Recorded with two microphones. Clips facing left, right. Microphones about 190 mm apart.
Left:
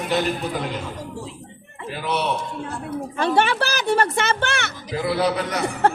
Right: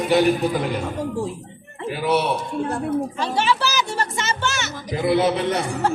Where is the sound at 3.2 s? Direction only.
55° left (ahead or behind).